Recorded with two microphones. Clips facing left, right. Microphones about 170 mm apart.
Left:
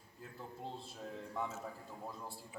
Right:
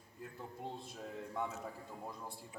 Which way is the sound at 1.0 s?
Centre (ahead or behind).